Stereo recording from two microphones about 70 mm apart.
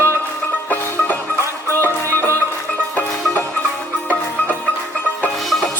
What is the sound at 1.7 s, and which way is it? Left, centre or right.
Music, right.